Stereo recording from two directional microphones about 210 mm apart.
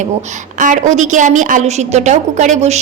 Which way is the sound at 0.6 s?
35° right (ahead or behind).